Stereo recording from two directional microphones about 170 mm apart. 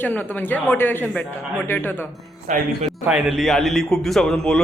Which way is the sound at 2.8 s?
5° right (ahead or behind).